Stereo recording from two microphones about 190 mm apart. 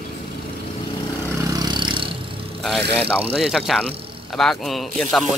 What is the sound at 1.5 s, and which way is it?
Vehicle, 20° right (ahead or behind).